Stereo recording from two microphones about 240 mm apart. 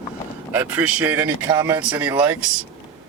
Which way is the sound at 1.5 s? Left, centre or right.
Centre.